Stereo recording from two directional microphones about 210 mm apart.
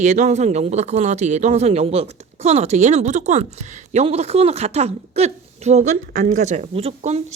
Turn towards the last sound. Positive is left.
turn(degrees=-30)  # may be behind; listen again after turning